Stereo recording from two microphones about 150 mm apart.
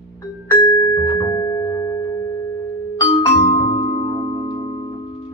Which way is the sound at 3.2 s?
25° left (ahead or behind).